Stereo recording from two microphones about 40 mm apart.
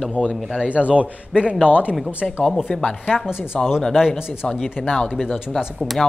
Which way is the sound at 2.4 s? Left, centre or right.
Centre.